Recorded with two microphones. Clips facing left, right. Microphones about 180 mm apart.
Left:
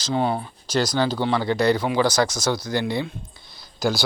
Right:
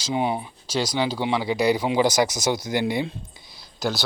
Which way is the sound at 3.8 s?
Centre (ahead or behind).